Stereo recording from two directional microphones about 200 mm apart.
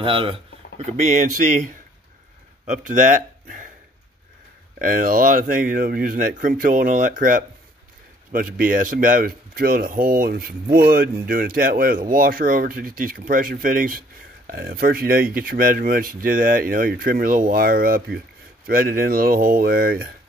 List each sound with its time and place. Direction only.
0.0 s speech: 25° right (ahead or behind)
2.6 s speech: 40° right (ahead or behind)
4.7 s speech: 45° right (ahead or behind)